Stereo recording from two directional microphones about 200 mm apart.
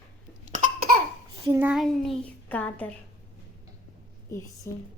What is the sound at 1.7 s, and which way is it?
A child's voice, centre (ahead or behind).